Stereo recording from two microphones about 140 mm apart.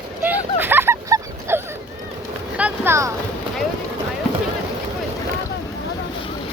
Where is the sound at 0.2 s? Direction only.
15° right (ahead or behind).